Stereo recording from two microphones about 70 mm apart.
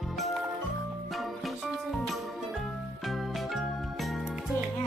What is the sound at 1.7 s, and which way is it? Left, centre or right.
Music, centre.